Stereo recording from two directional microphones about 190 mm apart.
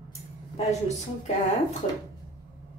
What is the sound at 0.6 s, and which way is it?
A woman's voice, 35° left (ahead or behind).